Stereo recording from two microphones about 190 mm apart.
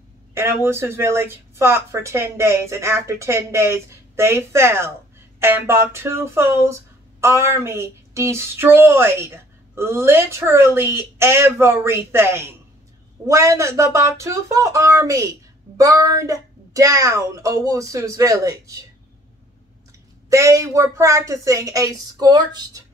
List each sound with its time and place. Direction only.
0.3 s speech: 15° right (ahead or behind)
20.2 s speech: 15° right (ahead or behind)